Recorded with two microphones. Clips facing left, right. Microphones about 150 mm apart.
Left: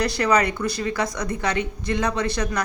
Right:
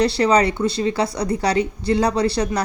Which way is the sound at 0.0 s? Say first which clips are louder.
Right 4 dB; 30° right (ahead or behind).